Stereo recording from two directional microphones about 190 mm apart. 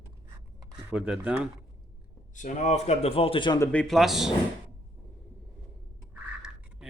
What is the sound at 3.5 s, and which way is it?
Speech, 5° left (ahead or behind).